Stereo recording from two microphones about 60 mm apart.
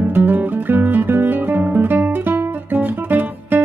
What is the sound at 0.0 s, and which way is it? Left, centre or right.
Music, right.